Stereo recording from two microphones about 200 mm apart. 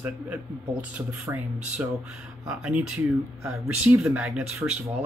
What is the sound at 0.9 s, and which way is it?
Speech, 5° right (ahead or behind).